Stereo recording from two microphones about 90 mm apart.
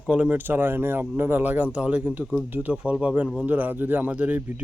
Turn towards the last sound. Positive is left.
turn(degrees=-15)  # may be behind; listen again after turning